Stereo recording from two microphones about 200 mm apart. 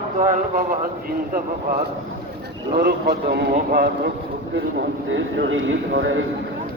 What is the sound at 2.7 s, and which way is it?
A man's voice, 50° right (ahead or behind).